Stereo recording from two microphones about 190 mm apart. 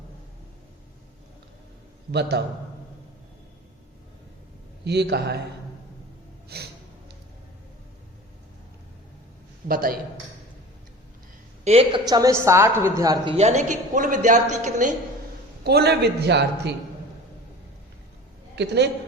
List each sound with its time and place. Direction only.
4.9 s a man's voice: 60° right (ahead or behind)
6.5 s music: 55° right (ahead or behind)
9.6 s a man's voice: 50° right (ahead or behind)
11.6 s a woman's voice: 30° right (ahead or behind)
13.3 s a woman's voice: 35° right (ahead or behind)
15.6 s a man's voice: 60° right (ahead or behind)
18.5 s a man's voice: 65° right (ahead or behind)